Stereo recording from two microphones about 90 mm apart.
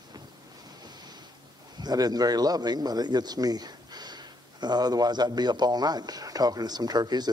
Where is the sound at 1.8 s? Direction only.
45° right (ahead or behind).